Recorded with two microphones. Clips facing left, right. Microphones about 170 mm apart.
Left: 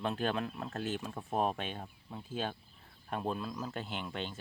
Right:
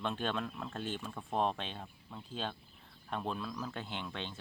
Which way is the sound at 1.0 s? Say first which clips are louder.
Even; 15° left (ahead or behind).